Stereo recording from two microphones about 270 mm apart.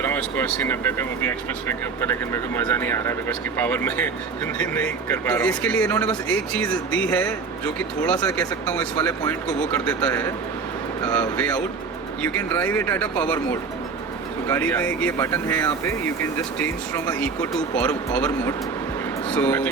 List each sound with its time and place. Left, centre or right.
0.0 s speech: centre